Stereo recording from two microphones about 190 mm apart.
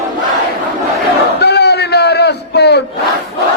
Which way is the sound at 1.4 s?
60° left (ahead or behind).